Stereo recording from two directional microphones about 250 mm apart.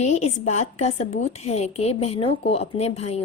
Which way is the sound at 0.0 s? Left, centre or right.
Left.